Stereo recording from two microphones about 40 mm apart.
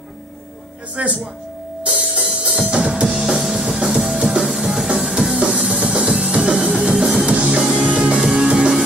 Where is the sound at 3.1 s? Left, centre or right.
Centre.